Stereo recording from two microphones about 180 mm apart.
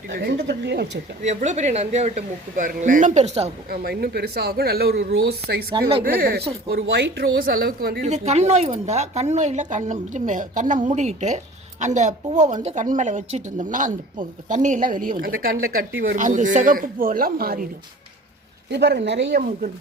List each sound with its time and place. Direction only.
0.1 s speech: 65° right (ahead or behind)
1.2 s speech: 40° right (ahead or behind)
3.7 s speech: 60° right (ahead or behind)
8.0 s a woman's voice: 40° right (ahead or behind); by 17.7 s 55° right (ahead or behind)
18.7 s speech: 70° right (ahead or behind)